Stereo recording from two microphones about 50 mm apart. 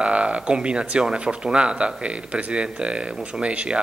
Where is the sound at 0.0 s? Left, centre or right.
Right.